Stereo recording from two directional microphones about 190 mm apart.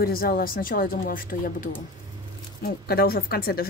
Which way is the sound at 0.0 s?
50° left (ahead or behind).